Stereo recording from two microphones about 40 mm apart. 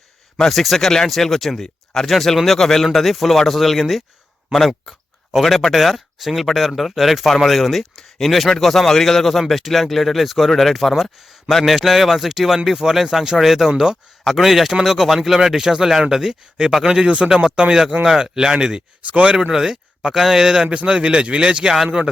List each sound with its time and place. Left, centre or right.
0.5 s speech: centre
1.6 s a sound: centre
2.0 s speech: centre
5.4 s speech: centre
20.8 s speech: right